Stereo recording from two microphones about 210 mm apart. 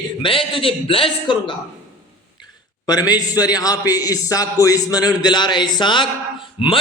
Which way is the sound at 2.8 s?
20° left (ahead or behind).